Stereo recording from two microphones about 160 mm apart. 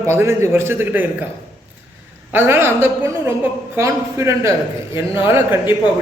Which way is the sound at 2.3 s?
15° right (ahead or behind).